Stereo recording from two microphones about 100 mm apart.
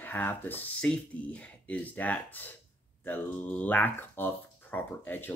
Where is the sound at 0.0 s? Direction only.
20° left (ahead or behind).